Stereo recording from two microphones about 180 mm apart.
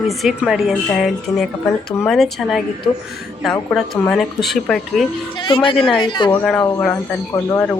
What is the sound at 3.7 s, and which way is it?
A woman's voice, 5° left (ahead or behind).